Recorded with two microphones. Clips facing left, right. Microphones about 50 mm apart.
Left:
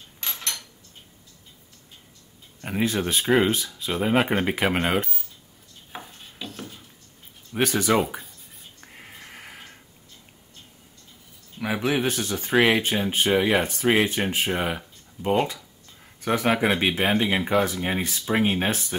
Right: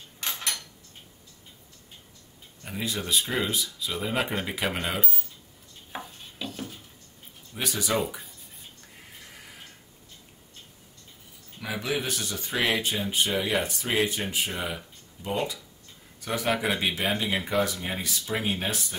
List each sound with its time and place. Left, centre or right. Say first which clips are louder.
0.2 s a sound: right 1 dB; centre
2.6 s speech: left 8 dB; left
5.9 s a sound: right 1 dB; centre
7.5 s speech: left 8 dB; left
8.8 s a sound: left 8 dB; left
11.6 s speech: left 6 dB; left
12.5 s speech: left 7 dB; centre
12.8 s speech: left 4 dB; left
17.4 s speech: left 4 dB; centre
17.6 s speech: left 5 dB; left